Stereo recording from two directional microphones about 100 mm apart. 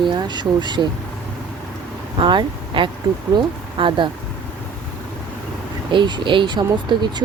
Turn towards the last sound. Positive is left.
turn(degrees=-45)  # may be behind; listen again after turning